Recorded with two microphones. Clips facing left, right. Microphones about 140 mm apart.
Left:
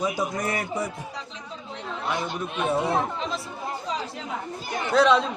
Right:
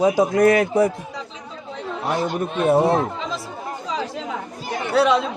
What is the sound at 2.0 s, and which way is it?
Speech, 40° right (ahead or behind).